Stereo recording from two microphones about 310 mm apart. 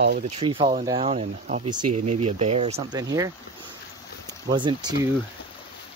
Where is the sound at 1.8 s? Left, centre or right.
Right.